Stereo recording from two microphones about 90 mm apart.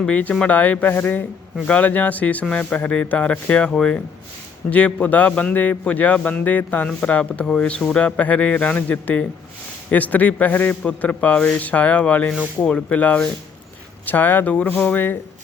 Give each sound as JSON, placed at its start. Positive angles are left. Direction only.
{"t": 0.0, "sound": "a man's voice", "side_deg": 15}